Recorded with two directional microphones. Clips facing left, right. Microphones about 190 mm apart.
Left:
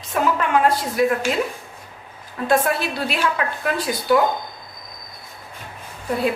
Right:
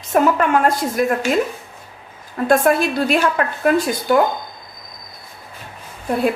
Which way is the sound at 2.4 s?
50° right (ahead or behind).